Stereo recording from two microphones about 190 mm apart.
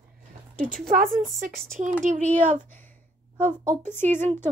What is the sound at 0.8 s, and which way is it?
Speech, 45° right (ahead or behind).